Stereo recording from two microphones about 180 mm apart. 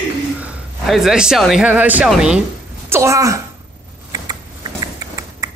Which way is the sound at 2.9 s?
15° right (ahead or behind).